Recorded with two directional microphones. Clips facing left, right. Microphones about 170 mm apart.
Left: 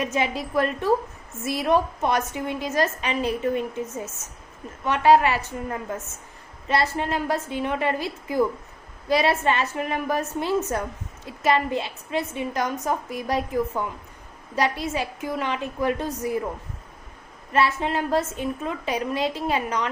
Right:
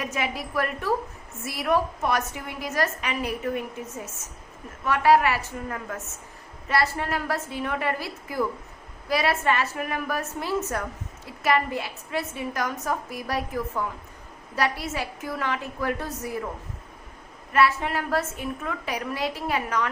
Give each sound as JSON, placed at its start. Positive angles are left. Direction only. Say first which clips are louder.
{"t": 0.0, "sound": "a woman's voice", "louder": "left 4 dB", "side_deg": 25}
{"t": 17.5, "sound": "a woman's voice", "louder": "even", "side_deg": 25}